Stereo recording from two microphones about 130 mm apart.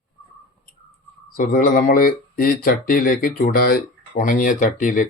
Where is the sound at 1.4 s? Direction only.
90° left.